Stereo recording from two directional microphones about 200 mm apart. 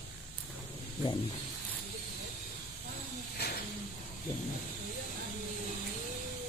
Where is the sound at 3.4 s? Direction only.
55° left (ahead or behind).